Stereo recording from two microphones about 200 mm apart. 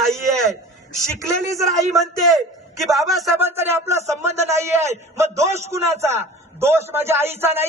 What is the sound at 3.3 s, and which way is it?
A man's voice, 10° right (ahead or behind).